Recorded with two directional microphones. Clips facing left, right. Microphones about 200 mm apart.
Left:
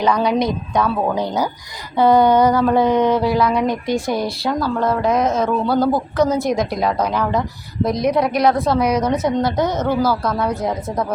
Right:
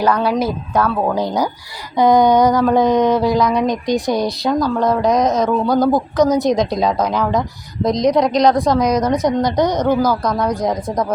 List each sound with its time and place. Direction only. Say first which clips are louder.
0.3 s a woman's voice: even; 5° right (ahead or behind)
8.2 s a woman's voice: right 2 dB; 5° left (ahead or behind)
8.5 s speech: right 2 dB; 15° right (ahead or behind)
8.8 s a woman's voice: right 2 dB; 10° left (ahead or behind)
9.0 s speech: right 2 dB; 15° right (ahead or behind)